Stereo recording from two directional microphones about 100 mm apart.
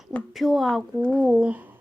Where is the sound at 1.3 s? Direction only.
10° right (ahead or behind).